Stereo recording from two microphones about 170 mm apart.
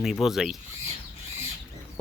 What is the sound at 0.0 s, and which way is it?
Speech, centre (ahead or behind).